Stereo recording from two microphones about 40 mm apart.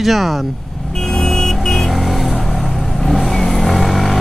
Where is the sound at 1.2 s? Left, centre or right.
Centre.